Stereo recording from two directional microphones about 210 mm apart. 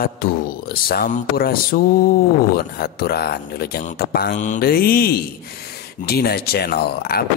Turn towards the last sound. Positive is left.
turn(degrees=45)  # may be behind; listen again after turning